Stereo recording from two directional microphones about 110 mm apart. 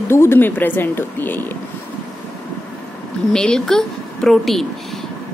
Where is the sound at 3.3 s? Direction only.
5° left (ahead or behind).